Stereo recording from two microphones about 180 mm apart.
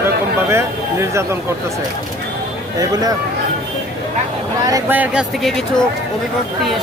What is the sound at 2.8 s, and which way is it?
Speech, 20° right (ahead or behind).